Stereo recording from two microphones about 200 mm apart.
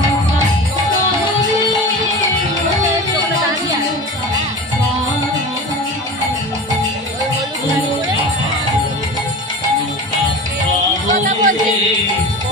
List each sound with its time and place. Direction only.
11.1 s music: 40° right (ahead or behind)